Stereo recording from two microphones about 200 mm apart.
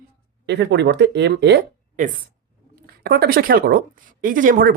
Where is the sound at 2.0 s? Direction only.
40° right (ahead or behind).